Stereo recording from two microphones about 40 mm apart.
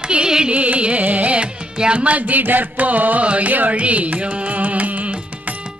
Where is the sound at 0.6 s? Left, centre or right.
Right.